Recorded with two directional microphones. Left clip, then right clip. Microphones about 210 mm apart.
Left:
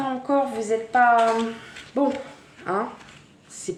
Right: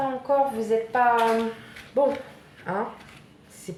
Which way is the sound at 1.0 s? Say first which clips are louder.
Left 4 dB; 45° left (ahead or behind).